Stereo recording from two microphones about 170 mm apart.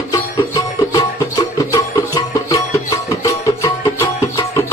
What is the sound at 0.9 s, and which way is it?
Music, 20° left (ahead or behind).